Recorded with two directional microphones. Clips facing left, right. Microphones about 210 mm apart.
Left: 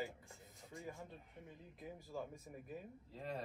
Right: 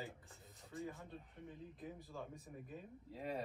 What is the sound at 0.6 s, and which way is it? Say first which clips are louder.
Speech: right 3 dB; centre (ahead or behind).